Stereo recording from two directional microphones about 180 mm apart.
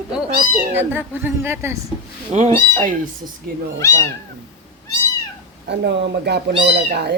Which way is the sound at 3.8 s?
15° left (ahead or behind).